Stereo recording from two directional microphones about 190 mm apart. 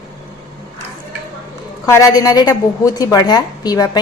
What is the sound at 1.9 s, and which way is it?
A woman's voice, 15° left (ahead or behind).